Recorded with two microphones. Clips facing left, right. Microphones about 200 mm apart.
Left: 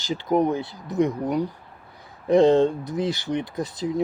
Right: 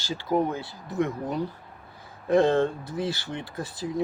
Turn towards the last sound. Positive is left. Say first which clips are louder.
# left 6 dB
turn(degrees=20)  # may be behind; listen again after turning